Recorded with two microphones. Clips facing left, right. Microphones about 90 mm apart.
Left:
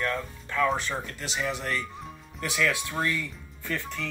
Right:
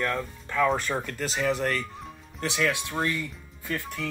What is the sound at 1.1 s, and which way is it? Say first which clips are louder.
Speech: right 4 dB; 40° right (ahead or behind).